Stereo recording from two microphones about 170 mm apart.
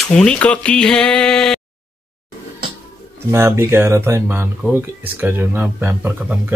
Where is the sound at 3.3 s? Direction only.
15° right (ahead or behind).